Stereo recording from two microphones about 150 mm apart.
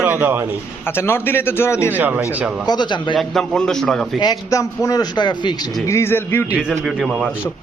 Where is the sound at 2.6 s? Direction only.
30° left (ahead or behind).